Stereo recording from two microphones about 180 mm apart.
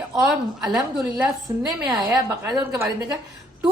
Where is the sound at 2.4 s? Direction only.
20° right (ahead or behind).